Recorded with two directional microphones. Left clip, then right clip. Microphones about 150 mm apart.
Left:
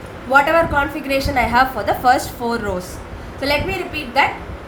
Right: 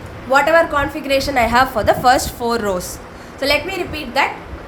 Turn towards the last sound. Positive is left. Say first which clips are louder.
# left 1 dB
turn(degrees=-30)  # may be behind; listen again after turning